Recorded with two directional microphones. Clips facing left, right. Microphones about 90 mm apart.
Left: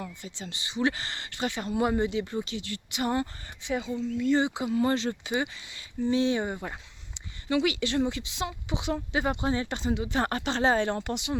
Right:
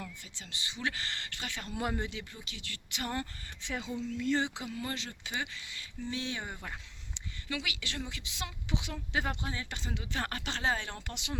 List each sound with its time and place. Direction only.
0.0 s speech: 25° left (ahead or behind)
2.2 s speech: 35° left (ahead or behind); by 3.2 s 15° left (ahead or behind)
3.6 s speech: 5° left (ahead or behind)
4.7 s speech: 35° left (ahead or behind)
5.2 s speech: 20° left (ahead or behind)
9.4 s speech: 30° left (ahead or behind)
9.8 s speech: 20° left (ahead or behind); by 11.1 s 40° left (ahead or behind)
11.1 s speech: 15° left (ahead or behind)